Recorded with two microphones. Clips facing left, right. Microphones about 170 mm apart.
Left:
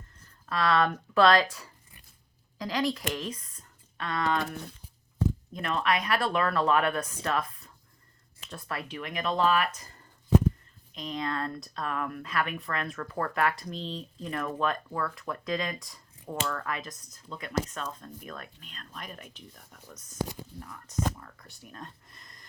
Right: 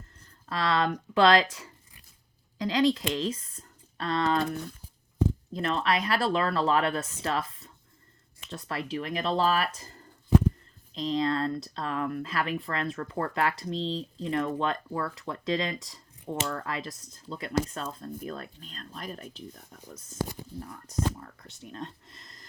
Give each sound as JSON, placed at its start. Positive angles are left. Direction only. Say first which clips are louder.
{"t": 0.4, "sound": "speech", "louder": "left 1 dB", "side_deg": -25}
{"t": 5.5, "sound": "speech", "louder": "right 2 dB", "side_deg": -30}